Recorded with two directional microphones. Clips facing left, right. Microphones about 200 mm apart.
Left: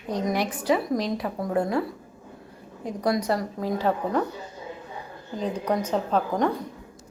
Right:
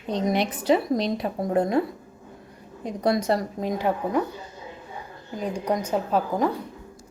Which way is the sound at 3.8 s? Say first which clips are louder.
Even; 15° right (ahead or behind).